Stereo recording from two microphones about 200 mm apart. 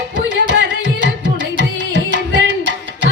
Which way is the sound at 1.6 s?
60° right (ahead or behind).